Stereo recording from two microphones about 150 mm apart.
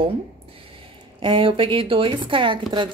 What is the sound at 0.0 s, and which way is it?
Speech, 40° right (ahead or behind).